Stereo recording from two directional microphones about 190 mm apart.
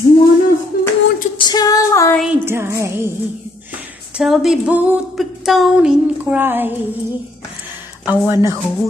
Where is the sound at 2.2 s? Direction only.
10° right (ahead or behind).